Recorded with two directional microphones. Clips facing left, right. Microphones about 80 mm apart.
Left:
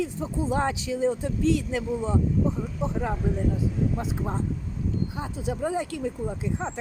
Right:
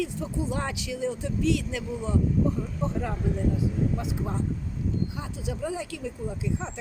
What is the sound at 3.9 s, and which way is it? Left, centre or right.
Speech, left.